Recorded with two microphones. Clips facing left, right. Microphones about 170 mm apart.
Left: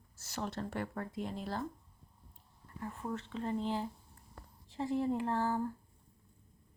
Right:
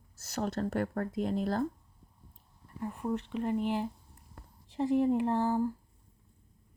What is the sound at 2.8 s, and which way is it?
Speech, 15° right (ahead or behind).